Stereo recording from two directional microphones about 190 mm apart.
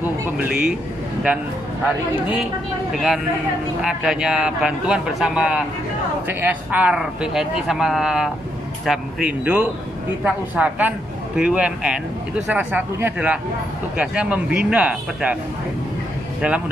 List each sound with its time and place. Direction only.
2.9 s a man's voice: centre (ahead or behind)
16.3 s a man's voice: 5° right (ahead or behind)